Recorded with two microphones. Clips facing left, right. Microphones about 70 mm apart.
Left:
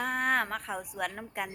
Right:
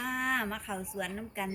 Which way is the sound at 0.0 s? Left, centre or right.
Left.